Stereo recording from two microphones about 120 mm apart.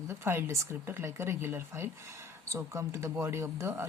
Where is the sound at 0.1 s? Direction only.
20° right (ahead or behind).